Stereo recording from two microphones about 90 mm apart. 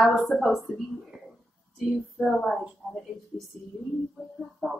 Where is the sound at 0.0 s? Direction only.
Centre (ahead or behind).